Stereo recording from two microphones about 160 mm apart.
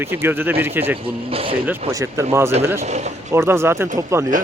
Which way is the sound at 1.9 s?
20° right (ahead or behind).